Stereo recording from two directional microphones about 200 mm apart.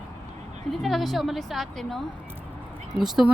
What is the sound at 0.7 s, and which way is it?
Speech, centre (ahead or behind).